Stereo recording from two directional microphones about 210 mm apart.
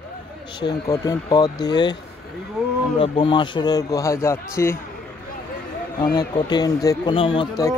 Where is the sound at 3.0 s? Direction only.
25° left (ahead or behind).